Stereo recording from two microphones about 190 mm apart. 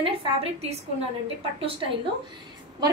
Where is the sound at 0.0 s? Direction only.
30° right (ahead or behind).